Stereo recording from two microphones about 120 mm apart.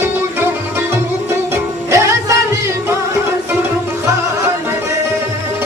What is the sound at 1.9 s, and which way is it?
Music, 25° right (ahead or behind).